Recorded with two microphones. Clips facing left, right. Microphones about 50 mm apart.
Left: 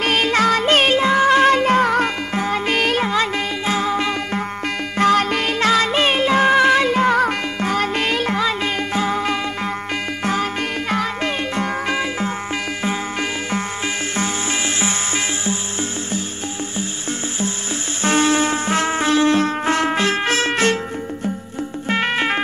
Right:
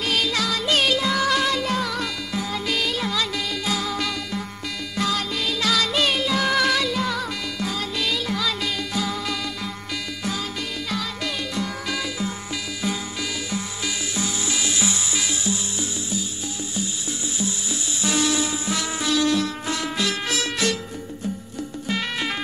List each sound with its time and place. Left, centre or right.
0.0 s music: left
4.9 s music: left
10.9 s music: left
18.0 s music: left
21.8 s music: left